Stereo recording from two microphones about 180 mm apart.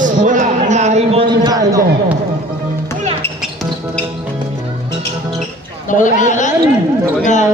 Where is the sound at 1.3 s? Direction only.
20° right (ahead or behind).